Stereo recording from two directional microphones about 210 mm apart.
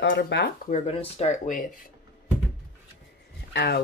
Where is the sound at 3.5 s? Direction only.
50° left (ahead or behind).